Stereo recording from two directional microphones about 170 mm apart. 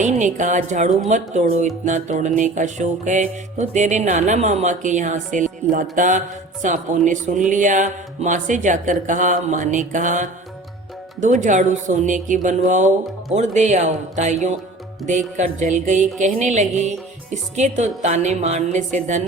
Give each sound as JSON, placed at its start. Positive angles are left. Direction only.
{"t": 0.0, "sound": "speech", "side_deg": -45}